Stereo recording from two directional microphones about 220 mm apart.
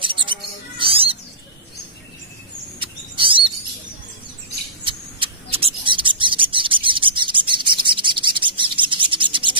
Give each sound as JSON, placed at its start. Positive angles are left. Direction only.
{"t": 0.0, "sound": "mouse", "side_deg": -20}
{"t": 3.2, "sound": "bird", "side_deg": -25}
{"t": 4.8, "sound": "bird", "side_deg": -25}